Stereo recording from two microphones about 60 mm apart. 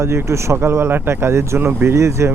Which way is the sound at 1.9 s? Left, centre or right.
Right.